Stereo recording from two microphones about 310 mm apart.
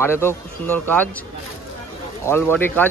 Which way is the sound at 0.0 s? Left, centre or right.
Centre.